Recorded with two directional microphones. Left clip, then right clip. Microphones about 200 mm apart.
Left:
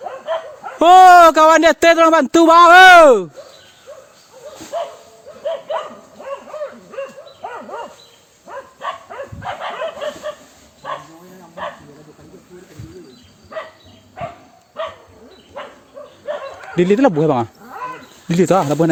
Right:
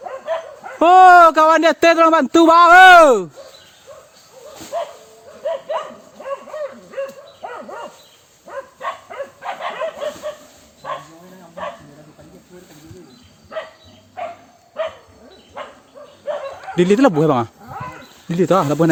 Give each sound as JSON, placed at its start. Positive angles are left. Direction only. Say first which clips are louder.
{"t": 0.8, "sound": "speech", "louder": "left 2 dB", "side_deg": 30}
{"t": 4.7, "sound": "bow-wow", "louder": "left 1 dB", "side_deg": -5}
{"t": 6.2, "sound": "hoot", "louder": "right 1 dB", "side_deg": -10}
{"t": 7.4, "sound": "dog", "louder": "left 2 dB", "side_deg": -15}
{"t": 11.6, "sound": "bow-wow", "louder": "left 1 dB", "side_deg": 0}
{"t": 16.2, "sound": "bow-wow", "louder": "right 1 dB", "side_deg": 0}
{"t": 18.3, "sound": "speech", "louder": "left 1 dB", "side_deg": 20}